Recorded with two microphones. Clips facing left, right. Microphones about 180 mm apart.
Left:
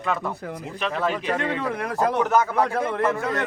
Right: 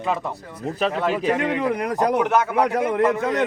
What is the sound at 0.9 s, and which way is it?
Speech, 5° right (ahead or behind).